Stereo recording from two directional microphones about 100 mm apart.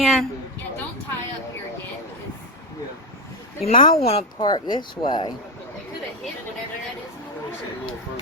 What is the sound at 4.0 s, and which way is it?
Speech, 90° left.